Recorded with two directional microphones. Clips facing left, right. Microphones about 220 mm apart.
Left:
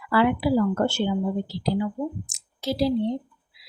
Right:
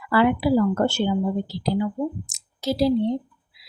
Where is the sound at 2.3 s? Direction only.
40° right (ahead or behind).